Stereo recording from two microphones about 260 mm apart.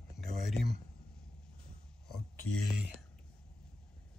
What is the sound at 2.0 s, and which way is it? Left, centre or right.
Speech, centre.